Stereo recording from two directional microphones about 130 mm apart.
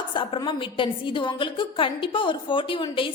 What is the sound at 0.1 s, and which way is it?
A woman's voice, 40° left (ahead or behind).